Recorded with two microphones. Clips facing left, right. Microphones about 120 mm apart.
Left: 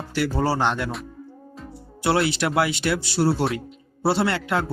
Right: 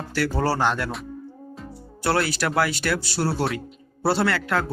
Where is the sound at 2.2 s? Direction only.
25° left (ahead or behind).